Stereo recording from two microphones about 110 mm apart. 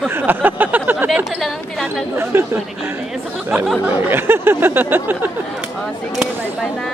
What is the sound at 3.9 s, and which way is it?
Speech, 20° right (ahead or behind).